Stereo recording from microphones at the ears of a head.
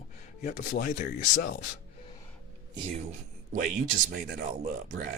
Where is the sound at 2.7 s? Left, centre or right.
Right.